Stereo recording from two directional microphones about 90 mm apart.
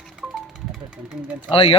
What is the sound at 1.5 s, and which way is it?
Speech, 90° left.